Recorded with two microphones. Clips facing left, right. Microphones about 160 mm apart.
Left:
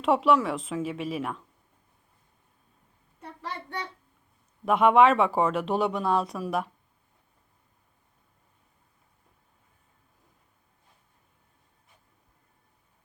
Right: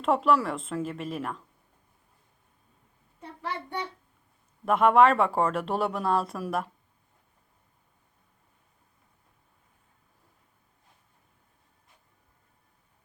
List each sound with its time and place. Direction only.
0.0 s speech: centre (ahead or behind)
4.6 s speech: centre (ahead or behind)